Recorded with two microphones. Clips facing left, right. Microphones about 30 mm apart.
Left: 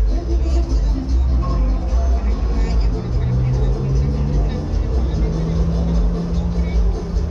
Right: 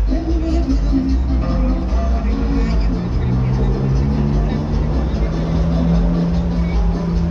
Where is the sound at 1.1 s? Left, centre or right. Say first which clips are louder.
Right 5 dB; right.